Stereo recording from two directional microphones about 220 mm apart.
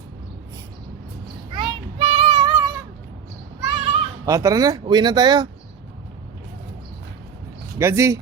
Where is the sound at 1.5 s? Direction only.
25° right (ahead or behind).